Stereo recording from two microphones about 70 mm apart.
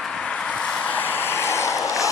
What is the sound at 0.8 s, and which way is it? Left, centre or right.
Vehicle, left.